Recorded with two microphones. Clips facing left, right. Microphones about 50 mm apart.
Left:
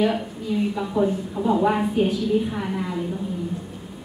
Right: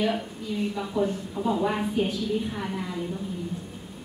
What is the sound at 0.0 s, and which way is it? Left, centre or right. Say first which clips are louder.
A woman's voice: left 5 dB; centre.